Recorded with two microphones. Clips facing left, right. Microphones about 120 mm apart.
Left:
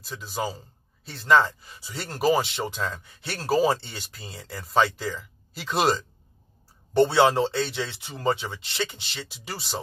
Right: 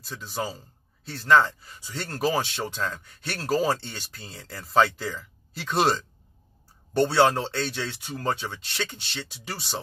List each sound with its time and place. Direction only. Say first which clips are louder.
0.1 s speech: left 1 dB; 10° left (ahead or behind)
7.0 s speech: left 2 dB; 15° left (ahead or behind)